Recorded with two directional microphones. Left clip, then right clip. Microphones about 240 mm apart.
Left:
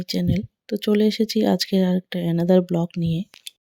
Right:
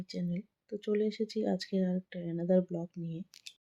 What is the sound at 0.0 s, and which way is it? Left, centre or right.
Speech, left.